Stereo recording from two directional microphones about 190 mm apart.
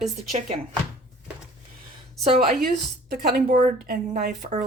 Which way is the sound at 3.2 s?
45° right (ahead or behind).